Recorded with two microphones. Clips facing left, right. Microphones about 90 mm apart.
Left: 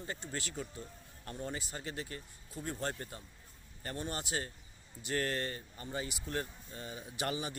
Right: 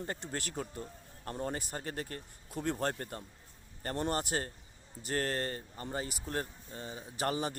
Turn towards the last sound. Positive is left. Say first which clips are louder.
# right 4 dB
turn(degrees=-40)  # may be behind; listen again after turning